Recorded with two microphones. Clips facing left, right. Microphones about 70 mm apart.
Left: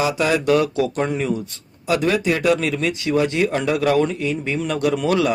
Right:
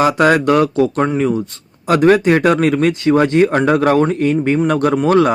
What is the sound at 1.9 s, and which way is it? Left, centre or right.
Speech, right.